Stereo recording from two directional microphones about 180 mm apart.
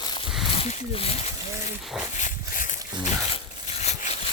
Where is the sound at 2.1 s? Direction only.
45° left (ahead or behind).